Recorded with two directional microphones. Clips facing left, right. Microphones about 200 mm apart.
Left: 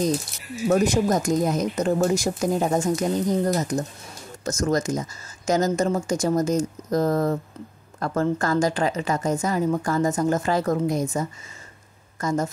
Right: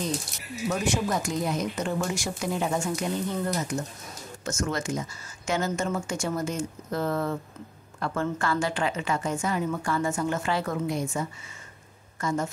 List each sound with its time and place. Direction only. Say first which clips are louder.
0.7 s a woman's voice: left 7 dB; 40° left (ahead or behind)